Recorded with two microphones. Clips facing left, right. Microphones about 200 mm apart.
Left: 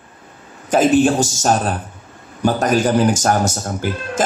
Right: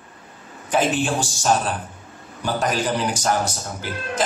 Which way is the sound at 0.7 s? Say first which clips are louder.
Left 8 dB; 40° left (ahead or behind).